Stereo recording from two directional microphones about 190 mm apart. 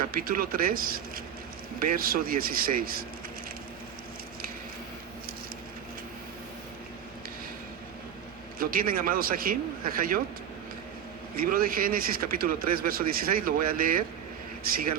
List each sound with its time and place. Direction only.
0.1 s speech: 50° right (ahead or behind)
8.5 s speech: 50° right (ahead or behind)
11.3 s a man's voice: 50° right (ahead or behind)